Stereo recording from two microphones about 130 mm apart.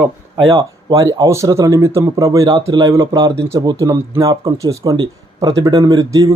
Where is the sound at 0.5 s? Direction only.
25° right (ahead or behind).